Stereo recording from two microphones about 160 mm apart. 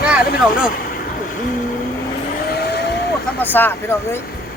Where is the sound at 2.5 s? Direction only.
90° left.